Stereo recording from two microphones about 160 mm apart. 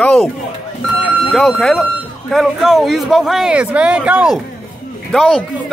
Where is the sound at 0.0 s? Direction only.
5° left (ahead or behind).